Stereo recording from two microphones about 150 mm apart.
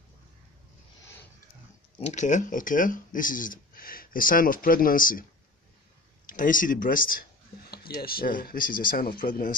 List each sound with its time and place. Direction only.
2.0 s speech: 50° left (ahead or behind); by 5.2 s 70° left (ahead or behind)
6.2 s speech: 65° left (ahead or behind)
7.7 s speech: 90° left; by 9.5 s 70° left (ahead or behind)